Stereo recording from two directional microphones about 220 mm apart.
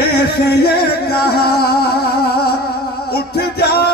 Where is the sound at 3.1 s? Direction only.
45° left (ahead or behind).